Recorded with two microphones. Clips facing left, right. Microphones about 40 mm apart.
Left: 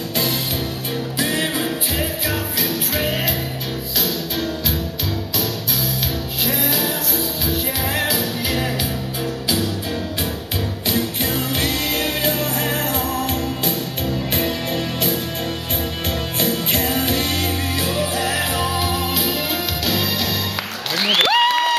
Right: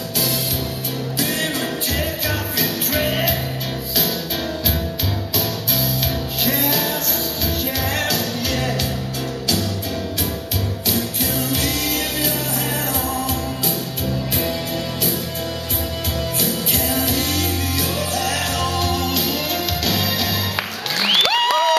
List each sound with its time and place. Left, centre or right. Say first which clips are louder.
1.2 s music: left 1 dB; left
2.0 s music: even; centre
6.4 s music: right 1 dB; centre
10.9 s music: left 2 dB; left
16.3 s music: left 4 dB; left; by 20.1 s centre
21.3 s music: left 1 dB; centre